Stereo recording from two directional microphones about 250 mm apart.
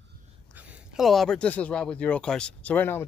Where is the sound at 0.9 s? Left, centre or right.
Centre.